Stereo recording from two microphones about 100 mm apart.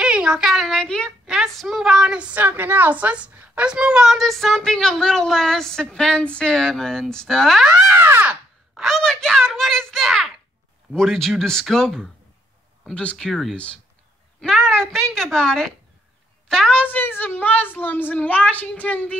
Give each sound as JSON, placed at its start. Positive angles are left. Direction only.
{"t": 0.0, "sound": "speech", "side_deg": -10}
{"t": 1.2, "sound": "a woman's voice", "side_deg": 0}
{"t": 8.0, "sound": "a sound", "side_deg": -25}
{"t": 8.3, "sound": "a woman's voice", "side_deg": 0}
{"t": 14.7, "sound": "a woman's voice", "side_deg": 5}
{"t": 16.9, "sound": "a child's voice", "side_deg": 20}